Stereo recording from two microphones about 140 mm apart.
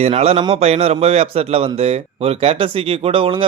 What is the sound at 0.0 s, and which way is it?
A man's voice, 50° right (ahead or behind).